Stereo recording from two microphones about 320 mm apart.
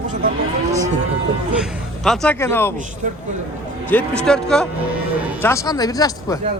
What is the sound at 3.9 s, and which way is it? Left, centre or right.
Speech, centre.